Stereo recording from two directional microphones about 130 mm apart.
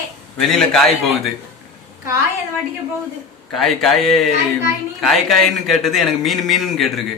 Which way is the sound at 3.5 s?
Centre (ahead or behind).